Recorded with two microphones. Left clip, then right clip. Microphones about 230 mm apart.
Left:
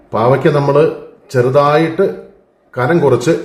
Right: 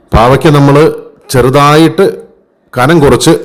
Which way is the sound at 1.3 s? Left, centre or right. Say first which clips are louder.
Right 5 dB; right.